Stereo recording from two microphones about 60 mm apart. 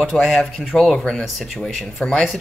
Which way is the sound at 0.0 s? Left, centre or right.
Centre.